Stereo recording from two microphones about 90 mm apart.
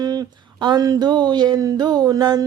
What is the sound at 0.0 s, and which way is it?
Speech, 45° right (ahead or behind).